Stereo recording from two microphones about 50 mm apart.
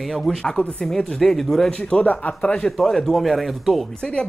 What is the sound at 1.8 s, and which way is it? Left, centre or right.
Speech, left.